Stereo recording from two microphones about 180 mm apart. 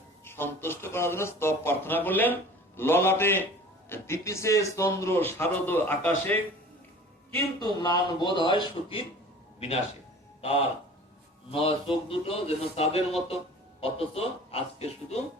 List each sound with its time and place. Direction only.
0.3 s a man's voice: 10° left (ahead or behind)
7.3 s a man's voice: 25° left (ahead or behind)
10.4 s speech: 35° left (ahead or behind)